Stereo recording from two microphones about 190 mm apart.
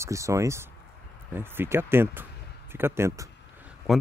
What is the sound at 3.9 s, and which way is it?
Speech, centre (ahead or behind).